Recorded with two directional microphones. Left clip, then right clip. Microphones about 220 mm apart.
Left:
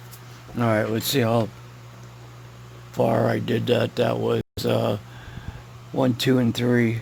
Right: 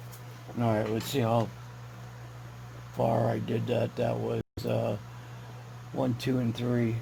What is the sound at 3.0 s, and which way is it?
Speech, 50° left (ahead or behind).